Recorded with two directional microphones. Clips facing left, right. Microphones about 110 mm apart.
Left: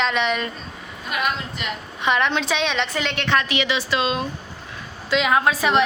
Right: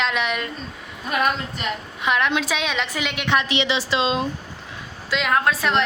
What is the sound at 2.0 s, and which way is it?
A woman's voice, centre (ahead or behind).